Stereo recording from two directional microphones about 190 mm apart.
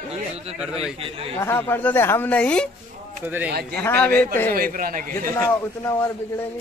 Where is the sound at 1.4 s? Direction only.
10° left (ahead or behind).